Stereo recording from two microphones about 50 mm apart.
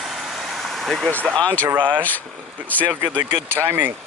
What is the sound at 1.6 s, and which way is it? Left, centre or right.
Speech, right.